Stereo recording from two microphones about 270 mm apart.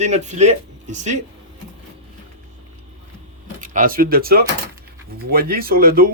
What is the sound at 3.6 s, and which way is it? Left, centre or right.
Speech, right.